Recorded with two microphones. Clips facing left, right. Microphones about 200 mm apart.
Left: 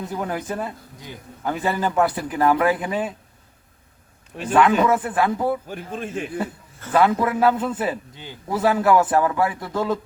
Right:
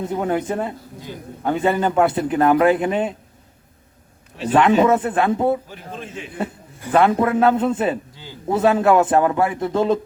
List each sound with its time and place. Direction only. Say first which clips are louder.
0.0 s a man's voice: right 6 dB; 25° right (ahead or behind)
4.5 s a man's voice: right 3 dB; 25° right (ahead or behind)
5.6 s speech: left 4 dB; 50° left (ahead or behind)
6.4 s a man's voice: right 2 dB; 20° right (ahead or behind)
8.1 s a man's voice: left 1 dB; 20° left (ahead or behind)
8.4 s a man's voice: right 3 dB; 25° right (ahead or behind)